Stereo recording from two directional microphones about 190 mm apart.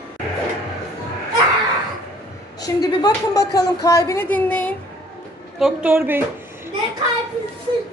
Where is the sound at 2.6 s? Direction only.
20° left (ahead or behind).